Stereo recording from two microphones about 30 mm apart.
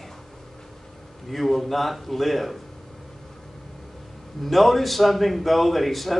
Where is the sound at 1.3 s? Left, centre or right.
Centre.